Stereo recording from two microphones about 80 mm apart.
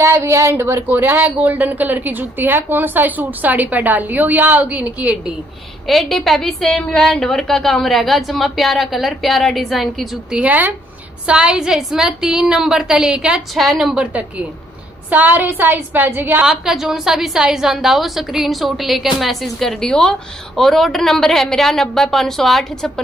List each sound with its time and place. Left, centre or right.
0.0 s speech: right; by 5.3 s centre
5.9 s a woman's voice: centre
10.3 s a woman's voice: centre
13.6 s a woman's voice: centre
15.0 s speech: right
16.4 s a woman's voice: centre